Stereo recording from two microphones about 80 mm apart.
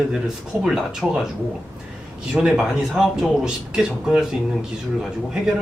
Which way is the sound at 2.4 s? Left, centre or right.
Centre.